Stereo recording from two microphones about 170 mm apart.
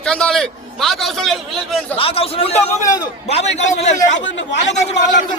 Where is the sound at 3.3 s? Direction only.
40° left (ahead or behind).